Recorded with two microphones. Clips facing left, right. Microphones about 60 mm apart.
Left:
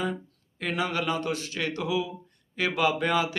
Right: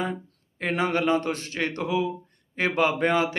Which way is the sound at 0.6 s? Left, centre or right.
Right.